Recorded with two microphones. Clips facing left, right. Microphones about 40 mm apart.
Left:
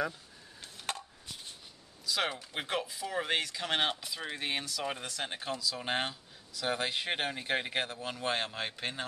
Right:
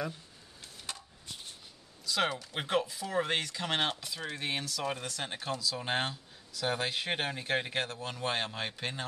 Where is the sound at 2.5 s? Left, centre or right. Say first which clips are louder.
Right 3 dB; centre.